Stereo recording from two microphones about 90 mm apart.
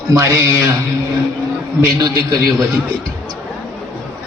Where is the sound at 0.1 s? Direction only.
30° right (ahead or behind).